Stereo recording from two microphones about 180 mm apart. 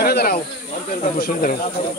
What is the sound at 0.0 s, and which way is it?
Snake, 60° left (ahead or behind).